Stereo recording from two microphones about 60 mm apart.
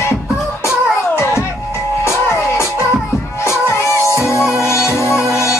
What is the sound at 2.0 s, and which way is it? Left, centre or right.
Music, left.